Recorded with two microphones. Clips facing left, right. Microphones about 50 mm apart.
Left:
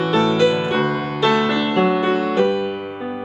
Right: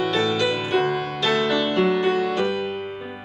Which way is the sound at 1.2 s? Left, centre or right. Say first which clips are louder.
Left 4 dB; centre.